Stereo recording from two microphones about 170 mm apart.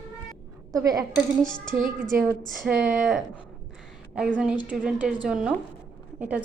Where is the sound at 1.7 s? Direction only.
50° right (ahead or behind).